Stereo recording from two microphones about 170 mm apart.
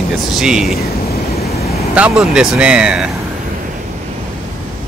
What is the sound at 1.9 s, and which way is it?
Speech, 5° right (ahead or behind).